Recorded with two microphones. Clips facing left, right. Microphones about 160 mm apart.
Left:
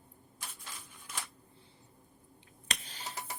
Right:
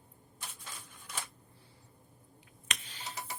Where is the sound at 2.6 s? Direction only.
35° left (ahead or behind).